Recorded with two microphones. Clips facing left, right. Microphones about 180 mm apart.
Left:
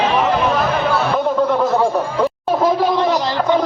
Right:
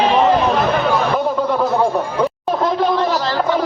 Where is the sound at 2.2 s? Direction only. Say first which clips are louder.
Left 3 dB; 5° left (ahead or behind).